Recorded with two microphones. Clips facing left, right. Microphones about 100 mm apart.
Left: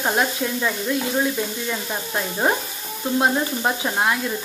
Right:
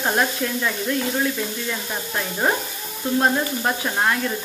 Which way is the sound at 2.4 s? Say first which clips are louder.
Even; 15° left (ahead or behind).